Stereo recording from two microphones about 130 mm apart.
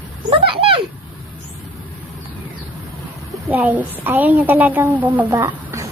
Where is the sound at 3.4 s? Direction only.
15° right (ahead or behind).